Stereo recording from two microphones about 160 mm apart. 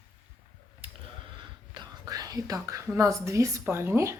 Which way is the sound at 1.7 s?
25° right (ahead or behind).